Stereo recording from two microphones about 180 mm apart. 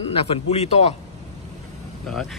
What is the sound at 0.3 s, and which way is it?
Speech, 35° left (ahead or behind).